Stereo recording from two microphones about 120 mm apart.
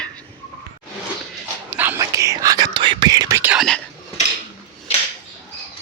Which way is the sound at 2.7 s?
45° right (ahead or behind).